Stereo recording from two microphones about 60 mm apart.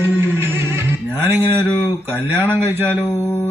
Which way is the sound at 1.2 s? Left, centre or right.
Right.